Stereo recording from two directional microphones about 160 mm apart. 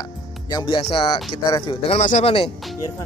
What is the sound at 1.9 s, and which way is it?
Speech, 45° left (ahead or behind).